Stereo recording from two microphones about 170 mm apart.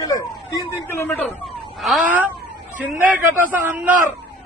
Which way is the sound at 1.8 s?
5° right (ahead or behind).